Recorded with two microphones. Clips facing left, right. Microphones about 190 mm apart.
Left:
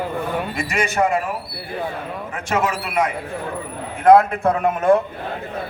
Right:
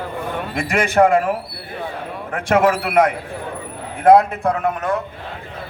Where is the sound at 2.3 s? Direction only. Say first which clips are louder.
Right 7 dB; 55° right (ahead or behind).